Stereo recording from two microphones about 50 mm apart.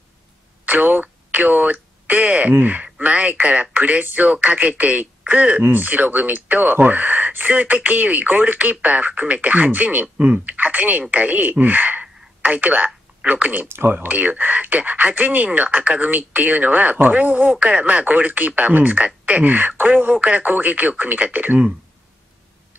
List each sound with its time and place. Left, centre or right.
0.7 s a sound: right
2.6 s speech: right
5.6 s speech: right
13.7 s speech: right
14.0 s speech: right